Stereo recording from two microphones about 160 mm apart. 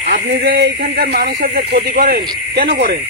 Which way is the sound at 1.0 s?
75° right (ahead or behind).